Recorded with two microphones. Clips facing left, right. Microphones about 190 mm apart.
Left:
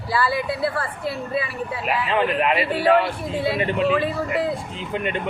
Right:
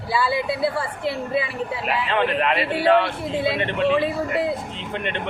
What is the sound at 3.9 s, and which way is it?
Speech, 15° right (ahead or behind).